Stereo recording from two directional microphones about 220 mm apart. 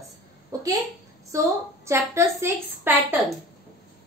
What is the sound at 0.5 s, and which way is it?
Speech, 15° right (ahead or behind).